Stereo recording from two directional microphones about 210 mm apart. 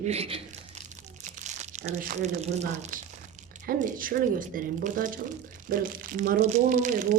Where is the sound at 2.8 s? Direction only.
40° right (ahead or behind).